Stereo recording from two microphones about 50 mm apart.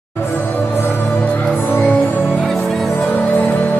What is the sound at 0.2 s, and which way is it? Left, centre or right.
Music, left.